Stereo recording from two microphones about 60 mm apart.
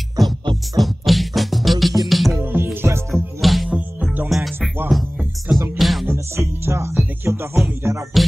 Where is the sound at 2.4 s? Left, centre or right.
Right.